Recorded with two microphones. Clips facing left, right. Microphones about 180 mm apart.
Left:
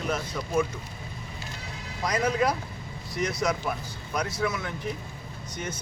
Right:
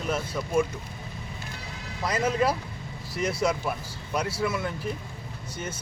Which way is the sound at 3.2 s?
30° right (ahead or behind).